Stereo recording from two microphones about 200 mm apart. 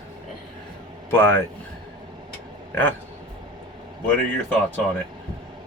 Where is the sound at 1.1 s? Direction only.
10° left (ahead or behind).